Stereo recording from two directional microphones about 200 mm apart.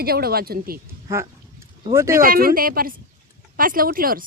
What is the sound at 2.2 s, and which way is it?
Speech, 45° right (ahead or behind).